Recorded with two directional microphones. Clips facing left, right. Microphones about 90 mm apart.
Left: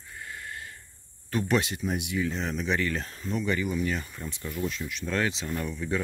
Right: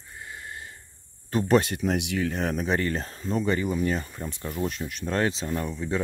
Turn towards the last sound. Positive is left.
turn(degrees=-25)  # may be behind; listen again after turning